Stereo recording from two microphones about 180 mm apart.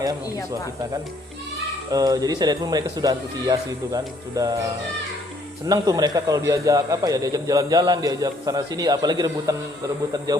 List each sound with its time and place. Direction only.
1.9 s a man's voice: 20° right (ahead or behind)
5.6 s a man's voice: 20° right (ahead or behind)